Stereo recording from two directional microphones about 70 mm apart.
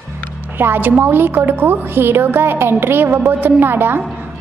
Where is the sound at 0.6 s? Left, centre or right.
Right.